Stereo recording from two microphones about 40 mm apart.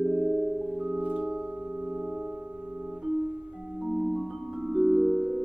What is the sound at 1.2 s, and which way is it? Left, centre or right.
Music, centre.